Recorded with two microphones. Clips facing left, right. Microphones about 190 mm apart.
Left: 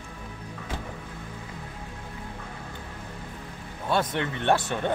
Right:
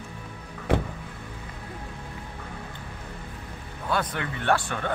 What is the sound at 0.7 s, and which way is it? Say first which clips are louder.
Music: right 12 dB; 70° right (ahead or behind).